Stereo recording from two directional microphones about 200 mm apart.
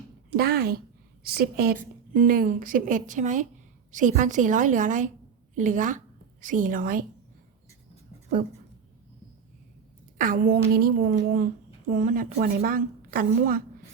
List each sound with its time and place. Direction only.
0.3 s a woman's voice: 50° right (ahead or behind)
10.2 s a woman's voice: 45° right (ahead or behind)